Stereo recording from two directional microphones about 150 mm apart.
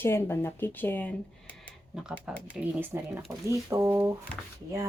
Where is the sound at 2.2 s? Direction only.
5° right (ahead or behind).